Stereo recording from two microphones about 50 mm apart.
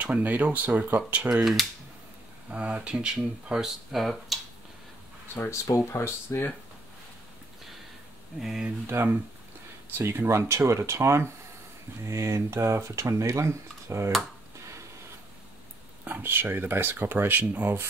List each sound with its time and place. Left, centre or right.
0.0 s speech: right
1.3 s speech: centre
2.5 s speech: right
3.6 s speech: centre
5.3 s speech: left
8.4 s speech: centre
8.8 s speech: right
16.0 s speech: right